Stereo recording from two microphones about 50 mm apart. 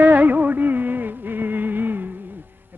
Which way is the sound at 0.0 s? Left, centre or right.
Right.